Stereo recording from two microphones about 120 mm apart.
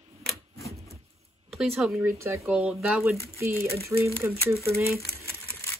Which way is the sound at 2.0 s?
25° right (ahead or behind).